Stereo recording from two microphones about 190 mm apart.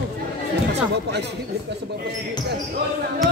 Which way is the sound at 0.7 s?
60° right (ahead or behind).